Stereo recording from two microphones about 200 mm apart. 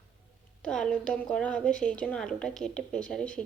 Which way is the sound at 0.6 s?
5° left (ahead or behind).